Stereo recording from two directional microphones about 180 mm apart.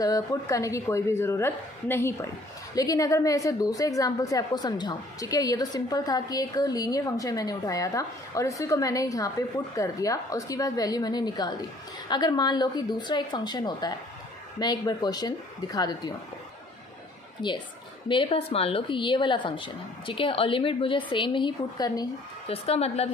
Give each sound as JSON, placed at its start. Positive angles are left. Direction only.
{"t": 0.0, "sound": "a woman's voice", "side_deg": 20}
{"t": 17.4, "sound": "a woman's voice", "side_deg": 25}
{"t": 22.5, "sound": "a woman's voice", "side_deg": 35}